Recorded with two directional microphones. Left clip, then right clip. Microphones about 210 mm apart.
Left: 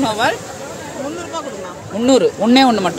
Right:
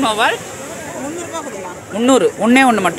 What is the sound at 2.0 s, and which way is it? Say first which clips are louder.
Speech: even; 5° left (ahead or behind).